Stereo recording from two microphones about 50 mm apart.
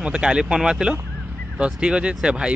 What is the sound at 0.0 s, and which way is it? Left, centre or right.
Speech, centre.